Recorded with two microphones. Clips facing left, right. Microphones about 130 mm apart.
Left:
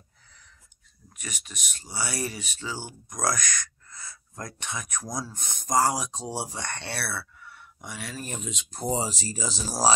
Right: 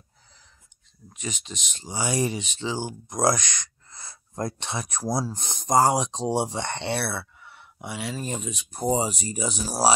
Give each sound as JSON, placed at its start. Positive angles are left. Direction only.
{"t": 1.1, "sound": "speech", "side_deg": -25}
{"t": 4.1, "sound": "speech", "side_deg": -35}